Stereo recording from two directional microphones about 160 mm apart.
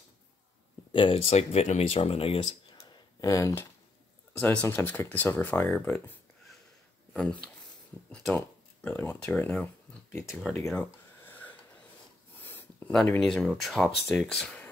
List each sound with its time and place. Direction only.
0.9 s speech: 35° left (ahead or behind)
3.2 s speech: 20° left (ahead or behind)
4.3 s speech: 10° left (ahead or behind)
8.1 s speech: 5° left (ahead or behind)
10.7 s a sound: 10° left (ahead or behind)
12.4 s speech: 10° left (ahead or behind)